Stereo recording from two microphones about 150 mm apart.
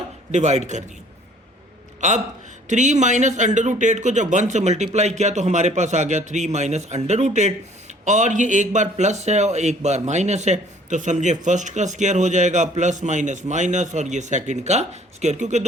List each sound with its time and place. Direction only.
0.3 s a man's voice: 50° right (ahead or behind)
2.0 s a man's voice: 50° right (ahead or behind)